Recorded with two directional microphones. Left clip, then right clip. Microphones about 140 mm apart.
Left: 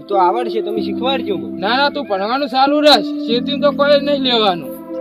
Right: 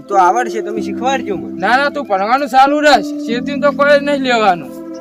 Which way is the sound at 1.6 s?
30° right (ahead or behind).